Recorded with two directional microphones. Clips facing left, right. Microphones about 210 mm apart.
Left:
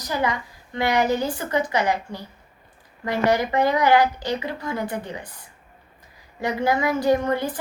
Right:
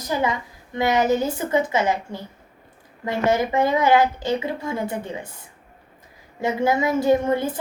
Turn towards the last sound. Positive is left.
turn(degrees=-25)  # may be behind; listen again after turning